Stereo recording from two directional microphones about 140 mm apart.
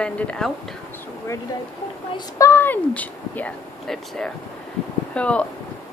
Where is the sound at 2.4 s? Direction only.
15° left (ahead or behind).